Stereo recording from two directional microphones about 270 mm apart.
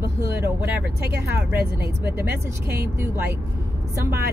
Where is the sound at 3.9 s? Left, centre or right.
Centre.